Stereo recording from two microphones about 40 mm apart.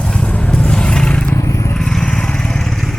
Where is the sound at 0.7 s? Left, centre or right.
Centre.